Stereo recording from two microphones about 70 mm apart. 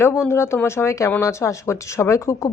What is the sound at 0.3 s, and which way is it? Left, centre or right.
Speech, left.